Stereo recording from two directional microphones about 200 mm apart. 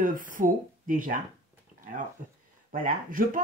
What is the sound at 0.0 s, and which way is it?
Speech, 40° right (ahead or behind).